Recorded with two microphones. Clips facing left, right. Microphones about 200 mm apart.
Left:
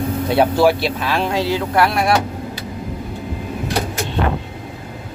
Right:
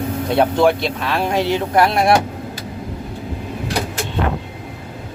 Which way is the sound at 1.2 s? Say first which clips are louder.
Right 3 dB; 20° right (ahead or behind).